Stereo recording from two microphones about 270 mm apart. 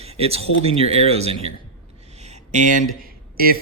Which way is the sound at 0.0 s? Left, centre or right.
Right.